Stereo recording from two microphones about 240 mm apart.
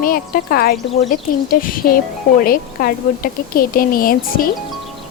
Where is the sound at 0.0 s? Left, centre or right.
Left.